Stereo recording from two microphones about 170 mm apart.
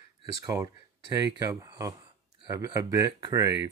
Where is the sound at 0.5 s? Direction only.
20° right (ahead or behind).